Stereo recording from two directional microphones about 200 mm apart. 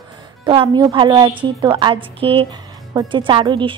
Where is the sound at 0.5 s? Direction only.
20° right (ahead or behind).